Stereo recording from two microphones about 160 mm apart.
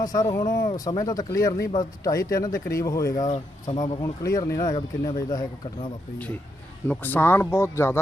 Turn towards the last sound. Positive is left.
turn(degrees=15)  # may be behind; listen again after turning